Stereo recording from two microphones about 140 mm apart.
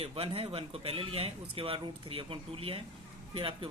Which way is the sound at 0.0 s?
40° right (ahead or behind).